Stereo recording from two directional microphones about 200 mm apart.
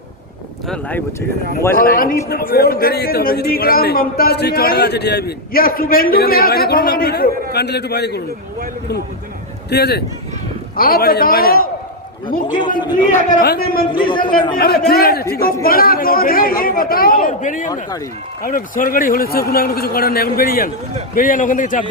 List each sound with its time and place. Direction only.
0.7 s speech: 10° left (ahead or behind)
1.7 s a man's voice: 45° left (ahead or behind)
9.6 s a man's voice: 55° left (ahead or behind)
12.6 s a man's voice: 25° left (ahead or behind)
13.1 s a man's voice: 50° left (ahead or behind)
13.9 s a man's voice: 25° left (ahead or behind)
14.2 s a man's voice: 45° left (ahead or behind)